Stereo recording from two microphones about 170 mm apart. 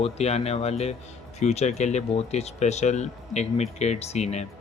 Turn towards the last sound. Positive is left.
turn(degrees=40)  # may be behind; listen again after turning